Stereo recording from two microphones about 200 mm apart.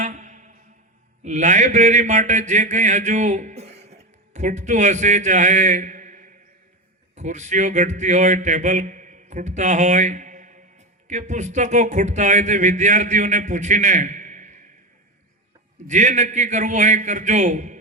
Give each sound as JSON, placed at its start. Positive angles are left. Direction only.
{"t": 0.0, "sound": "music", "side_deg": -35}
{"t": 1.2, "sound": "a man's voice", "side_deg": -35}
{"t": 15.9, "sound": "a man's voice", "side_deg": -35}